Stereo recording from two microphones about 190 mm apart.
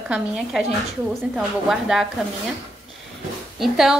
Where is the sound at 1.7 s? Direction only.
Centre (ahead or behind).